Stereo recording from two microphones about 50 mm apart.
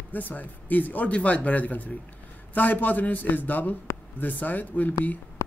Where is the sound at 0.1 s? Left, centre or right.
Left.